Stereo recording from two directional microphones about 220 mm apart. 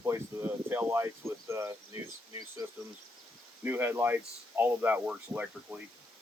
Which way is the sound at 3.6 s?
10° right (ahead or behind).